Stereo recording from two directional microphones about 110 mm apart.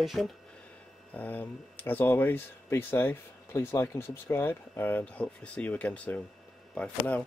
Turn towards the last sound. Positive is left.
turn(degrees=10)  # may be behind; listen again after turning